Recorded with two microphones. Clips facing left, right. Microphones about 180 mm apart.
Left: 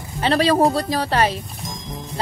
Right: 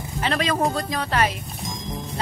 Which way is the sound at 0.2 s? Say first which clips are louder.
Left 6 dB; 35° left (ahead or behind).